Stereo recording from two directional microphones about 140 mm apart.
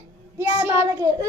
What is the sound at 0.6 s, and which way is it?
Speech, 20° right (ahead or behind).